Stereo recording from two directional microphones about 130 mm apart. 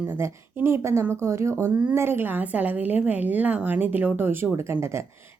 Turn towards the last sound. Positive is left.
turn(degrees=-20)  # may be behind; listen again after turning